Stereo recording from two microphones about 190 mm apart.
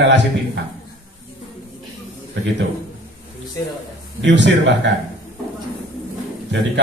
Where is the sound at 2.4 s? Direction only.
75° right (ahead or behind).